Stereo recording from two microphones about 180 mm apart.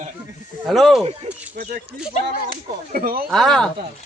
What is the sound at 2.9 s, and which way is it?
Speech, 55° right (ahead or behind).